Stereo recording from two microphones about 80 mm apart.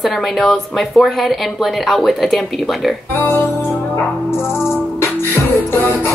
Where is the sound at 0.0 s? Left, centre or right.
Centre.